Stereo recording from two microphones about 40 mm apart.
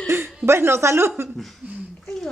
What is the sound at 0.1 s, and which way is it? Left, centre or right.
Speech, right.